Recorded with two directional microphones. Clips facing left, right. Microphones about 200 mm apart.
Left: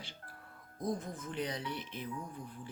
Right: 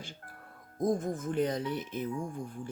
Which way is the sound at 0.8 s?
45° right (ahead or behind).